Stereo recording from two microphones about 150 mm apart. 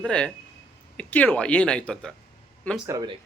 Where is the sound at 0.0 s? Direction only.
5° left (ahead or behind).